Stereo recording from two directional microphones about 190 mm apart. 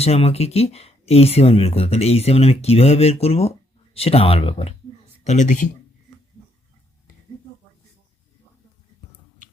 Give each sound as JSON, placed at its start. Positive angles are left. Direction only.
{"t": 0.0, "sound": "speech", "side_deg": 30}